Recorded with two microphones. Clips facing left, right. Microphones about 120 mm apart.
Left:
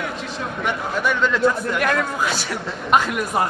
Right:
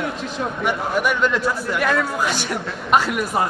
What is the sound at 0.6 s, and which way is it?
A man's voice, 10° right (ahead or behind).